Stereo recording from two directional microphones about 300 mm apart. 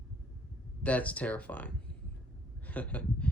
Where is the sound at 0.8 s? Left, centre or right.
Centre.